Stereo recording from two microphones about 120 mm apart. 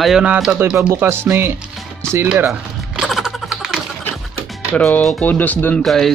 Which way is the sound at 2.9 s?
5° right (ahead or behind).